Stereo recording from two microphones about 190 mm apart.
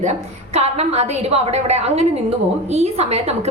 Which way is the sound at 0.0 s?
35° right (ahead or behind).